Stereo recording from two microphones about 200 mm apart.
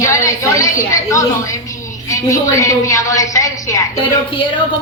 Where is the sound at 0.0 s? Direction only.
15° left (ahead or behind).